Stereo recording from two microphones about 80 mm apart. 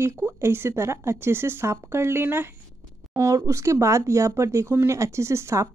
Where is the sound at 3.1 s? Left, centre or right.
Right.